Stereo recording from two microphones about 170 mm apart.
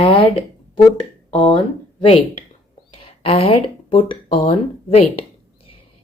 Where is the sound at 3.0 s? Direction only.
35° left (ahead or behind).